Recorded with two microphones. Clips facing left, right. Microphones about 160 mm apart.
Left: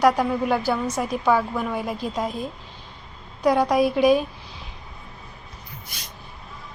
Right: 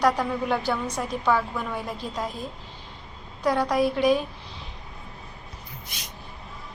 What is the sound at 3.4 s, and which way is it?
Speech, 15° left (ahead or behind).